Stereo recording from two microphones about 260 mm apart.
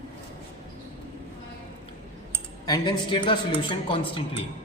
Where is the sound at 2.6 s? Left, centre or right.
Centre.